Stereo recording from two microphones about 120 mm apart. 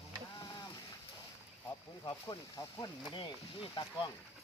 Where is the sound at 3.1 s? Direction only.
40° left (ahead or behind).